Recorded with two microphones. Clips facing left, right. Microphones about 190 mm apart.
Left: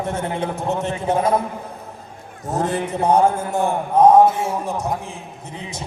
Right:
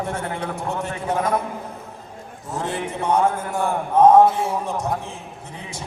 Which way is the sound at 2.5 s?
40° left (ahead or behind).